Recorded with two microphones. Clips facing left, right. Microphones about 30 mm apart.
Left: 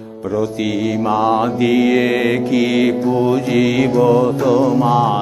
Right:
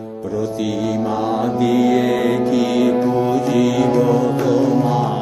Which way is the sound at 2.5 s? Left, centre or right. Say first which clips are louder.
Left 1 dB; centre.